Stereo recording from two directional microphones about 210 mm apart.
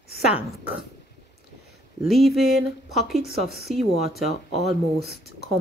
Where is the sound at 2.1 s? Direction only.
Centre (ahead or behind).